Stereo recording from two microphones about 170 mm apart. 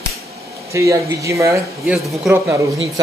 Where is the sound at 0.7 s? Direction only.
20° right (ahead or behind).